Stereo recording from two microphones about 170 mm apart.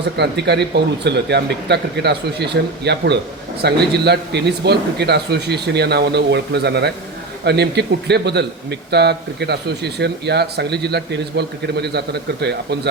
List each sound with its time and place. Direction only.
0.2 s a man's voice: 85° right